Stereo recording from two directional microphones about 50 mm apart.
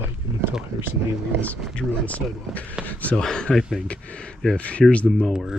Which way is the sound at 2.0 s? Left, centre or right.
Left.